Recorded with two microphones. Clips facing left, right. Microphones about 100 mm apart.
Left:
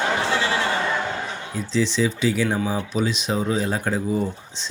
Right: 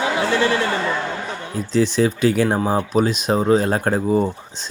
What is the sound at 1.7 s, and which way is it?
Speech, 50° right (ahead or behind).